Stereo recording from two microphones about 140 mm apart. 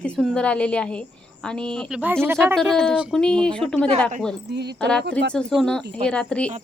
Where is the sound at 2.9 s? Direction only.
5° right (ahead or behind).